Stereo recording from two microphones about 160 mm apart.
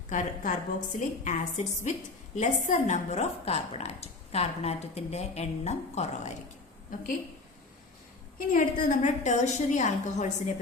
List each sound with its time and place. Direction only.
0.1 s a woman's voice: 55° left (ahead or behind)
6.9 s a woman's voice: 55° left (ahead or behind)
8.4 s a woman's voice: 50° left (ahead or behind)